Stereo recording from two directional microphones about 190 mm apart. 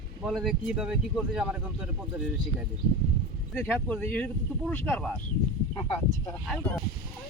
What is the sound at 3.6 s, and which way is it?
Speech, centre (ahead or behind).